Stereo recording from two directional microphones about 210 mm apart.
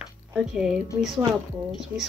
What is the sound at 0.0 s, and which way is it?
Music, 5° right (ahead or behind).